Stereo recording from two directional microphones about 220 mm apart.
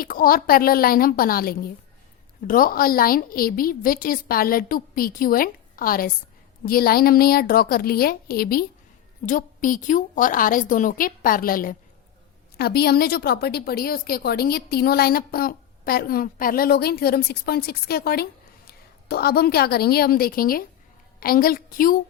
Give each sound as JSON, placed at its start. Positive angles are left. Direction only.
{"t": 0.0, "sound": "a woman's voice", "side_deg": 40}